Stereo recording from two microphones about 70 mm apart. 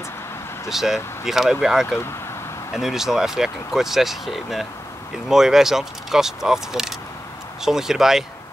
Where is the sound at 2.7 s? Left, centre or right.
Centre.